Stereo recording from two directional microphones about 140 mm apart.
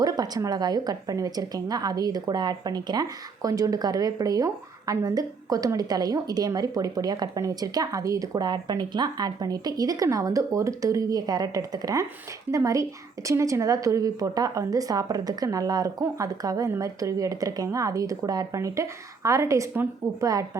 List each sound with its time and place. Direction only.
0.0 s a woman's voice: 25° right (ahead or behind)